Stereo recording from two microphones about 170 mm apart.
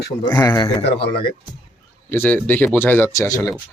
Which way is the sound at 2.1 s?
10° left (ahead or behind).